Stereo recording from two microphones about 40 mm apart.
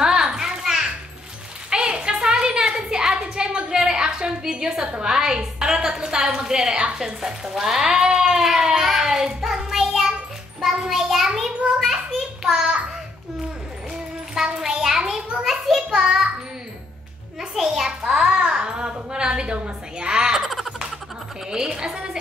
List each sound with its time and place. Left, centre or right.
0.0 s children playing: centre
1.7 s a sound: right
5.0 s a woman's voice: centre
8.5 s child singing: centre
11.8 s a sound: centre
14.3 s a sound: centre
15.9 s child singing: centre
17.4 s a child's voice: centre
20.3 s baby laughter: centre
21.5 s a woman's voice: centre